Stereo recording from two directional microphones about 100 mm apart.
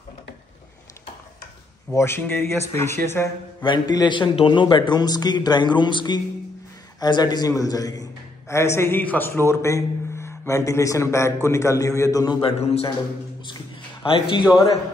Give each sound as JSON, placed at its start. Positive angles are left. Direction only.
{"t": 2.0, "sound": "speech", "side_deg": 25}
{"t": 3.6, "sound": "a man's voice", "side_deg": 50}
{"t": 12.4, "sound": "a man's voice", "side_deg": 80}
{"t": 14.0, "sound": "speech", "side_deg": 60}